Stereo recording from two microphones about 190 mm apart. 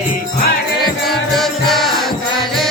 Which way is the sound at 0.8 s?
Centre (ahead or behind).